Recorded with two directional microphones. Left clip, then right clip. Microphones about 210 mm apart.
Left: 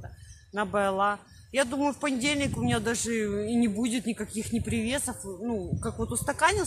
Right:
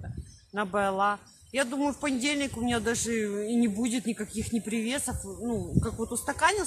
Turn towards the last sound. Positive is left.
turn(degrees=10)  # may be behind; listen again after turning